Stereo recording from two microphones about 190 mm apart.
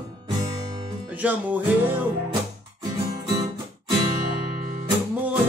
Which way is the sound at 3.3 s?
20° right (ahead or behind).